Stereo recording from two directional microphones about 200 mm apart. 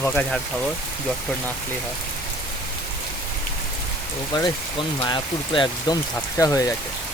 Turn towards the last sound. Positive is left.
turn(degrees=15)  # may be behind; listen again after turning